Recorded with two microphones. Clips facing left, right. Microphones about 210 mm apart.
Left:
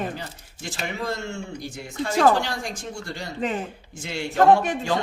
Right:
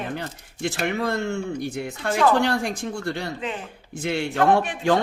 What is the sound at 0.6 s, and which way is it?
Speech, 60° right (ahead or behind).